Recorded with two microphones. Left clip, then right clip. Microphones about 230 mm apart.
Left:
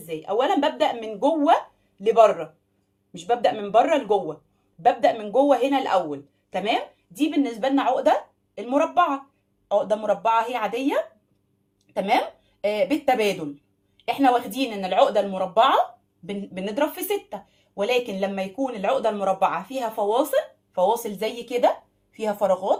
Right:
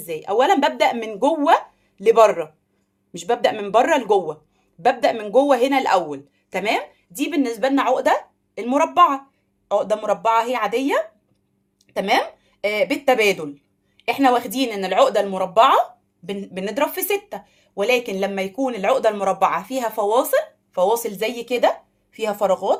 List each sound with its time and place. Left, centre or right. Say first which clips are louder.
0.1 s speech: right 5 dB; right